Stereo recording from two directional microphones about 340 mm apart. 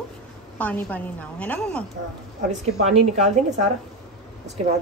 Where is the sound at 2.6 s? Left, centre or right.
Centre.